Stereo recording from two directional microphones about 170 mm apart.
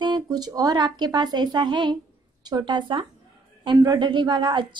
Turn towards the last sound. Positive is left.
turn(degrees=-30)  # may be behind; listen again after turning